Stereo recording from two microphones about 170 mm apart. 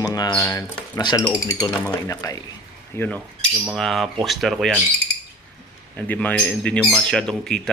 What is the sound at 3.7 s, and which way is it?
Speech, centre (ahead or behind).